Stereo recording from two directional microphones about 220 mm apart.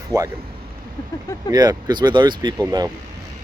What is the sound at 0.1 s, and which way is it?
Speech, 15° right (ahead or behind).